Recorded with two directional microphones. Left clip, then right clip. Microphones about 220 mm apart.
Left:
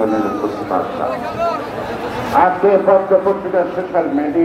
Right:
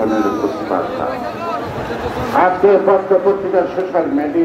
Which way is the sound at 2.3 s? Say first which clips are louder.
Even; 45° right (ahead or behind).